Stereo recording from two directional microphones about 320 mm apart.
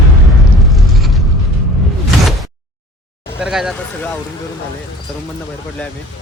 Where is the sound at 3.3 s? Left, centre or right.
Centre.